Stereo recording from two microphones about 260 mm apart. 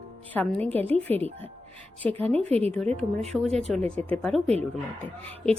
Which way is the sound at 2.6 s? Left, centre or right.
Centre.